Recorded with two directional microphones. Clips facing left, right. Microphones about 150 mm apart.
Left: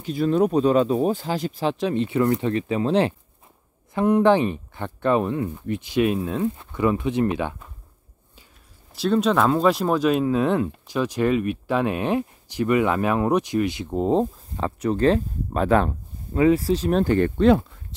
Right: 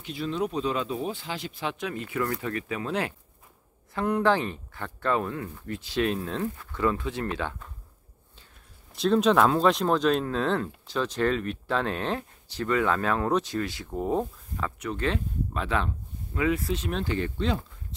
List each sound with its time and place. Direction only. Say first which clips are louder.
0.0 s speech: left 9 dB; 45° left (ahead or behind); by 7.7 s 10° left (ahead or behind)
8.9 s speech: left 1 dB; centre (ahead or behind); by 15.9 s 45° left (ahead or behind)
16.3 s speech: left 8 dB; 35° left (ahead or behind); by 17.6 s 55° left (ahead or behind)